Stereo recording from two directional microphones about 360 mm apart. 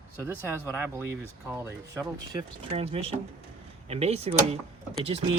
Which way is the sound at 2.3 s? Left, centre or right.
Centre.